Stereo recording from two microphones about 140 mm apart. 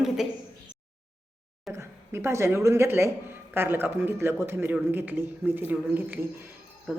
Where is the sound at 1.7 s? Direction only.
20° right (ahead or behind).